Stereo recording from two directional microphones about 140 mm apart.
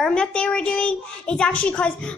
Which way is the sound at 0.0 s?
5° left (ahead or behind).